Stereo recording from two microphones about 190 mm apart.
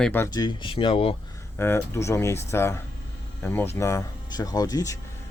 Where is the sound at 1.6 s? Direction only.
15° left (ahead or behind).